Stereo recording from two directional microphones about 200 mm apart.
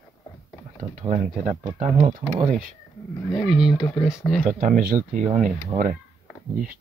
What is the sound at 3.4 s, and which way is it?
Speech, centre (ahead or behind).